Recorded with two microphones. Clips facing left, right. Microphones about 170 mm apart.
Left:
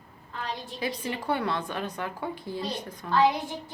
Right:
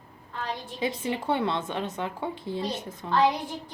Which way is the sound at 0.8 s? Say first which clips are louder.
Right 4 dB; 20° right (ahead or behind).